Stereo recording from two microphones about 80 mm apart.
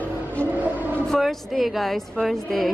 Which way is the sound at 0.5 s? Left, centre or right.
Right.